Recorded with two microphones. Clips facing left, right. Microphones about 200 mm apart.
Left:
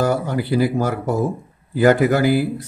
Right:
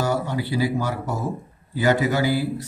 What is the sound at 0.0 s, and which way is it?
Speech, 50° left (ahead or behind).